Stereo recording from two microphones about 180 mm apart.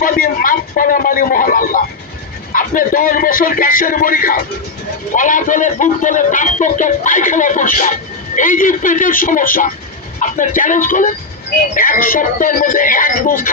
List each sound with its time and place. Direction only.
0.0 s speech: 50° left (ahead or behind)